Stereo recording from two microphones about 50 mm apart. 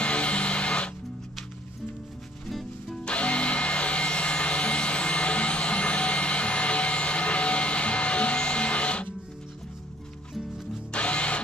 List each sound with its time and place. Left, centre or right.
0.0 s music: left
3.0 s tools: left
10.9 s music: left